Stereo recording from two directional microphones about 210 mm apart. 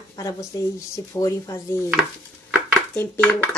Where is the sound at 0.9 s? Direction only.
15° left (ahead or behind).